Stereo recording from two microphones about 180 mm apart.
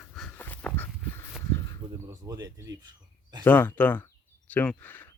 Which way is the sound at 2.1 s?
20° right (ahead or behind).